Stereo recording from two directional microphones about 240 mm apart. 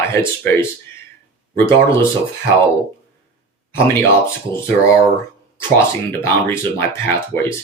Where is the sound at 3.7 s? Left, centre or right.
Centre.